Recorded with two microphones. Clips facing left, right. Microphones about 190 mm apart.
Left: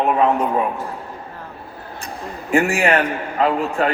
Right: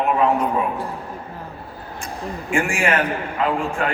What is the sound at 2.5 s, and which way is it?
A man's voice, 35° left (ahead or behind).